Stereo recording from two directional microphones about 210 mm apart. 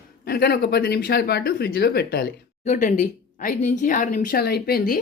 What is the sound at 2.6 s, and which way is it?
Speech, 35° left (ahead or behind).